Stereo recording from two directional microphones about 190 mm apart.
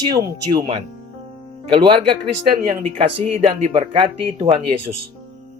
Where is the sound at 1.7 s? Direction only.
25° right (ahead or behind).